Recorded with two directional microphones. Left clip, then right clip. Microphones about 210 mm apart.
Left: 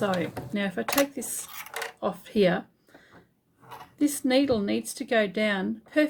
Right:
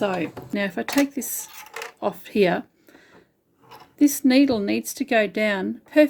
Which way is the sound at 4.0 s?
45° right (ahead or behind).